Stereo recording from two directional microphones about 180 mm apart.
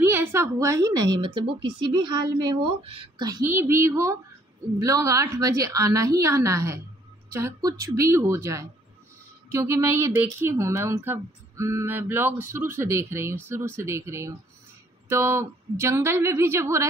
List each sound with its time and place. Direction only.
0.0 s a woman's voice: 10° right (ahead or behind)